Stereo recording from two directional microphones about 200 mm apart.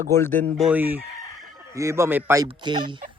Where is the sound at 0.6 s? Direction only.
5° right (ahead or behind).